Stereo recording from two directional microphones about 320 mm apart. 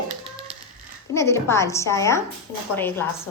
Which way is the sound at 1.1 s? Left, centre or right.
Centre.